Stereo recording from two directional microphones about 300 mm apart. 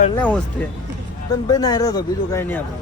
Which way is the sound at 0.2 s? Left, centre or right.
Centre.